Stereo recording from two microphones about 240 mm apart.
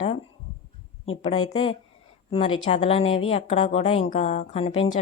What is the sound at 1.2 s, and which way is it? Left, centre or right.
A woman's voice, left.